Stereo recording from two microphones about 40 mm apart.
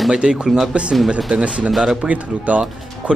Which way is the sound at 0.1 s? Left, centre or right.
Centre.